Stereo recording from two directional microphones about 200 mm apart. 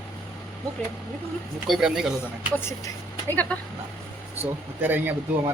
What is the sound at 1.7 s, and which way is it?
Speech, 5° right (ahead or behind).